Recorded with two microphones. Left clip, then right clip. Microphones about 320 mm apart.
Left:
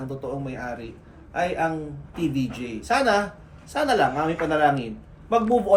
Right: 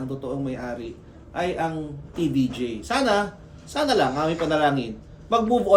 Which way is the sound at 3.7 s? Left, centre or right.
Centre.